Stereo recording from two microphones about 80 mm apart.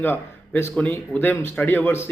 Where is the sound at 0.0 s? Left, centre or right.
Left.